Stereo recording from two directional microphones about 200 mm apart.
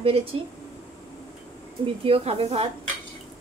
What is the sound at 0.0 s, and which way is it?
Speech, 30° right (ahead or behind).